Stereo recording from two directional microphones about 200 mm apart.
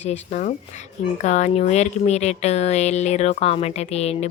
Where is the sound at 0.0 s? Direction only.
35° left (ahead or behind).